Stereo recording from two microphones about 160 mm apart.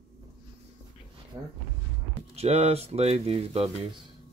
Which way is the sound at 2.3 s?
40° right (ahead or behind).